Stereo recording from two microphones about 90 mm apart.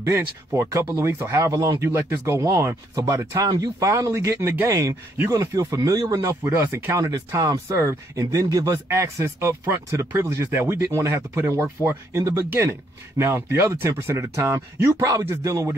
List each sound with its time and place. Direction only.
0.0 s speech: 30° right (ahead or behind)
6.4 s speech: 25° right (ahead or behind)